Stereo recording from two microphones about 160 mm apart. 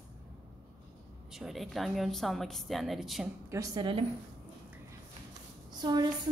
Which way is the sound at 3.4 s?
20° right (ahead or behind).